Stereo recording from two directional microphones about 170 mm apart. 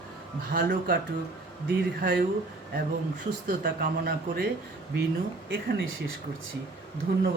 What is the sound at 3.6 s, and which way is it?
Speech, 60° right (ahead or behind).